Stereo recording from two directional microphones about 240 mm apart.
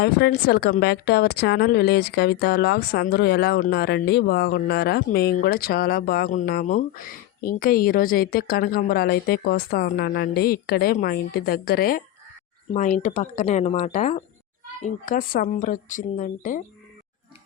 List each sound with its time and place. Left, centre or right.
0.0 s speech: left